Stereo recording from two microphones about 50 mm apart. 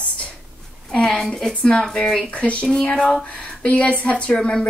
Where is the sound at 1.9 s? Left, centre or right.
Centre.